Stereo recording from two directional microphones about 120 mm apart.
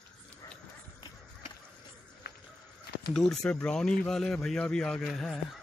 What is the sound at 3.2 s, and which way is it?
Speech, 5° left (ahead or behind).